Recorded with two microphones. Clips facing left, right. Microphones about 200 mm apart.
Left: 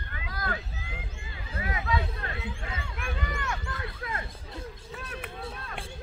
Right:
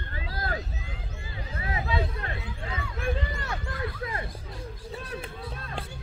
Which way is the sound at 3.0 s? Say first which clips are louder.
Right 5 dB; 30° right (ahead or behind).